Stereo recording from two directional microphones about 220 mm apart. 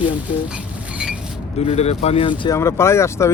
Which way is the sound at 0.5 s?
5° right (ahead or behind).